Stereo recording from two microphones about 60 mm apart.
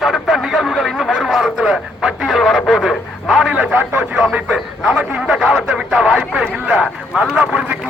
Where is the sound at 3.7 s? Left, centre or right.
Right.